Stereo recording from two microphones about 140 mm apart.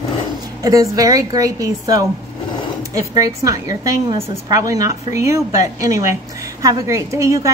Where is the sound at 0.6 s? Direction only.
25° right (ahead or behind).